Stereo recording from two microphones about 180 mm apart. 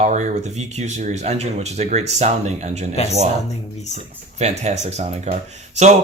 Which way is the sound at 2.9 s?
35° left (ahead or behind).